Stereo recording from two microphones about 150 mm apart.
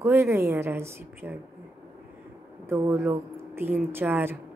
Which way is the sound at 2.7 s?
15° right (ahead or behind).